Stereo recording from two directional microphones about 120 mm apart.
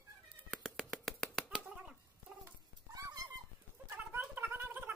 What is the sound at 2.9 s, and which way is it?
Dog, 30° right (ahead or behind).